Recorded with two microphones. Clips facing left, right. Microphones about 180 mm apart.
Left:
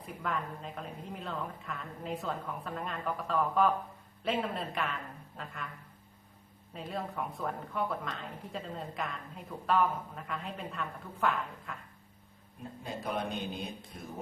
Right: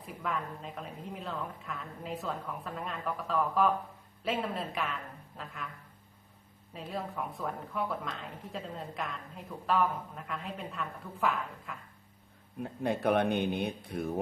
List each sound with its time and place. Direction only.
0.0 s a woman's voice: centre (ahead or behind)
5.3 s music: 5° right (ahead or behind)
6.7 s a woman's voice: centre (ahead or behind)
12.8 s speech: 60° right (ahead or behind)